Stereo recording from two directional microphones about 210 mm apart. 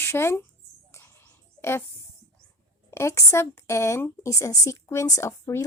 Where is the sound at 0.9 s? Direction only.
10° left (ahead or behind).